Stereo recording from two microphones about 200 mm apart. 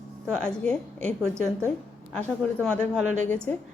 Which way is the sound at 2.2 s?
5° left (ahead or behind).